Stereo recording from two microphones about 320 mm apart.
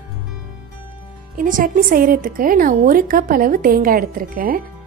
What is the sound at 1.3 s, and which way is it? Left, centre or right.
A woman's voice, right.